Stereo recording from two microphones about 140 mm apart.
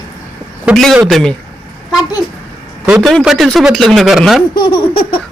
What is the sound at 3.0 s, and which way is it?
Speech, centre (ahead or behind).